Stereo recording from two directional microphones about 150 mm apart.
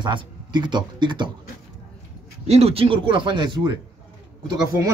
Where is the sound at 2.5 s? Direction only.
45° right (ahead or behind).